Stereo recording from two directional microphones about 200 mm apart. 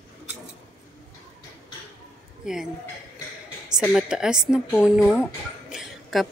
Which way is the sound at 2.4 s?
Centre (ahead or behind).